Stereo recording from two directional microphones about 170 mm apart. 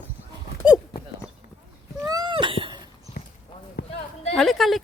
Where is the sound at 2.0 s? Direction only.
25° right (ahead or behind).